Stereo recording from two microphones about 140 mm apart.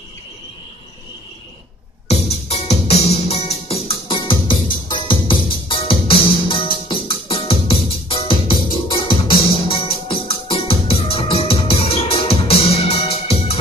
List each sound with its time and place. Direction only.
2.0 s music: 45° left (ahead or behind)